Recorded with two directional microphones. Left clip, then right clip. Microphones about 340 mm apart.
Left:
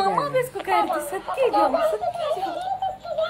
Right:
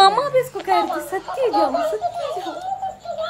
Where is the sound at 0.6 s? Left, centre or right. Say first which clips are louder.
Right 2 dB; centre.